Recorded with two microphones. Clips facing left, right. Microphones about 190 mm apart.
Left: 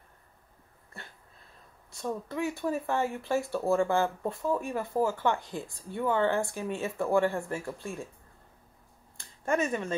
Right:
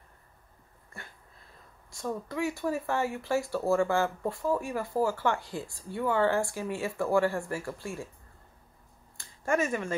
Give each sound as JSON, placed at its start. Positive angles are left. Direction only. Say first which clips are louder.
{"t": 2.0, "sound": "speech", "louder": "even", "side_deg": 20}
{"t": 9.4, "sound": "speech", "louder": "even", "side_deg": 20}